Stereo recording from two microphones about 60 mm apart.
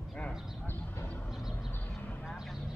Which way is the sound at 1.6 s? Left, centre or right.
Left.